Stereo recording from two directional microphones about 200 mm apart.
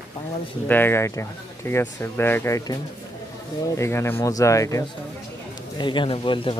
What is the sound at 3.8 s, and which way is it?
A man's voice, 10° left (ahead or behind).